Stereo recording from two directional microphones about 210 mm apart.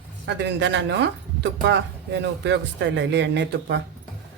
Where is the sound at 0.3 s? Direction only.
55° right (ahead or behind).